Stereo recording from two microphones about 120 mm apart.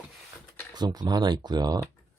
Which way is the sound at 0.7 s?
35° right (ahead or behind).